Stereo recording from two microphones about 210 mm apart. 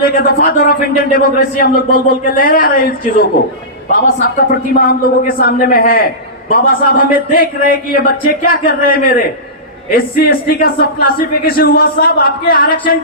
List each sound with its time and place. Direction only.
0.0 s speech: 45° left (ahead or behind)